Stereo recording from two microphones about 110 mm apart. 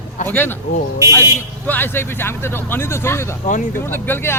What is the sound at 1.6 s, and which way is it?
A man's voice, 15° left (ahead or behind).